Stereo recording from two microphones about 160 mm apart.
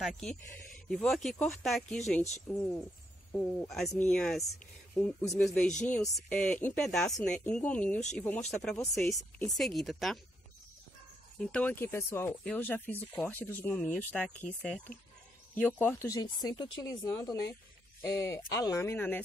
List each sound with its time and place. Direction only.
0.0 s speech: centre (ahead or behind)
9.5 s speech: centre (ahead or behind)
11.3 s speech: 5° left (ahead or behind)